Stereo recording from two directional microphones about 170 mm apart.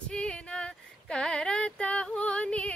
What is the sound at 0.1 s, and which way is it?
Female singing, 5° left (ahead or behind).